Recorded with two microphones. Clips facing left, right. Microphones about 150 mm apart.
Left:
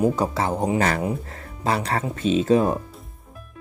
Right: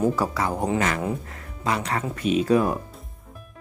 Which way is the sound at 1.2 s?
35° left (ahead or behind).